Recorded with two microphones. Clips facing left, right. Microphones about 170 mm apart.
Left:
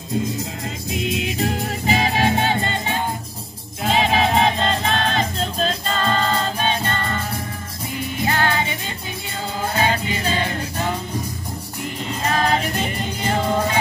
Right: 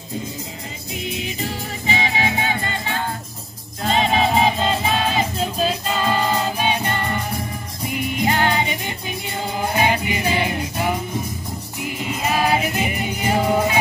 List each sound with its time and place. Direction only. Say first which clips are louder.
1.9 s music: left 3 dB; 40° left (ahead or behind); by 3.0 s 25° left (ahead or behind)
3.8 s music: even; centre (ahead or behind)